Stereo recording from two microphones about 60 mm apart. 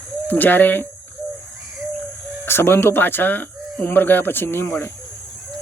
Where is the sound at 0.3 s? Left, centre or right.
Left.